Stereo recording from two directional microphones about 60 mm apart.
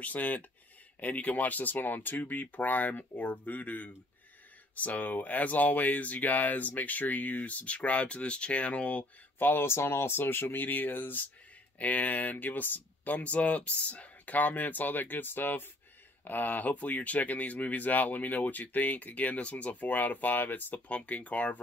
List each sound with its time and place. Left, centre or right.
0.0 s speech: left
9.4 s speech: left